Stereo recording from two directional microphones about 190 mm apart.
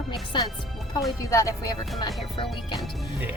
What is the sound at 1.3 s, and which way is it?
Speech, 15° left (ahead or behind).